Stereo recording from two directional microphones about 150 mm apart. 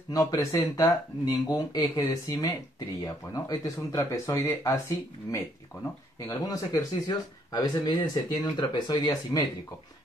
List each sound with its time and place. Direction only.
0.1 s speech: 25° left (ahead or behind)